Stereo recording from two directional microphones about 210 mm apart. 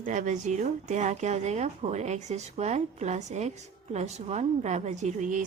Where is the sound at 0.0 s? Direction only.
35° right (ahead or behind).